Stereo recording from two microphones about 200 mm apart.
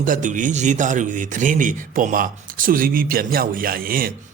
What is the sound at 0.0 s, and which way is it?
A man's voice, 40° right (ahead or behind).